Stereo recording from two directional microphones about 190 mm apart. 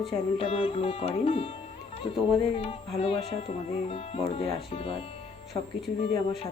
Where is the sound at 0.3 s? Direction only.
30° left (ahead or behind).